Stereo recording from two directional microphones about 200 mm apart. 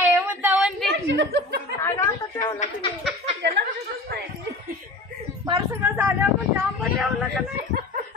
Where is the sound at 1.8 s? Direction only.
15° left (ahead or behind).